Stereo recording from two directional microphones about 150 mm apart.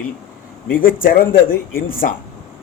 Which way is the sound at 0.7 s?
70° left (ahead or behind).